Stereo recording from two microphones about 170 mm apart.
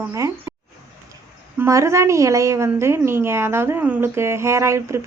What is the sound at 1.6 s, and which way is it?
A woman's voice, 15° right (ahead or behind).